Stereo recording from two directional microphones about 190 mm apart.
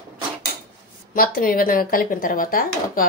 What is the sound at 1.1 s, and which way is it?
Speech, 50° left (ahead or behind).